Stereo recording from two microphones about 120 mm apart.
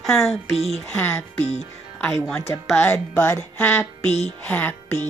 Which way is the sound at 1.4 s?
65° left (ahead or behind).